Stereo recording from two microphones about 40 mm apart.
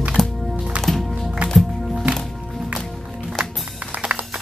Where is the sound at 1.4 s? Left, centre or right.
Right.